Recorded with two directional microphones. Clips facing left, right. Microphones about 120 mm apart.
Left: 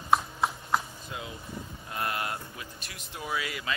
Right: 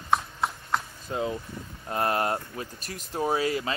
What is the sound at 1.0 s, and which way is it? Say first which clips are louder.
Speech: right 9 dB; 40° right (ahead or behind).